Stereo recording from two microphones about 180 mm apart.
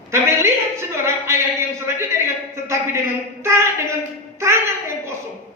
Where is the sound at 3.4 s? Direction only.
15° right (ahead or behind).